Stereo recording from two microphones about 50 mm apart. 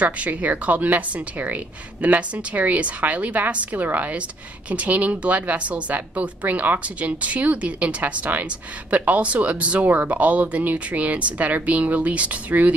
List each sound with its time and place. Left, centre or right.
0.0 s a woman's voice: right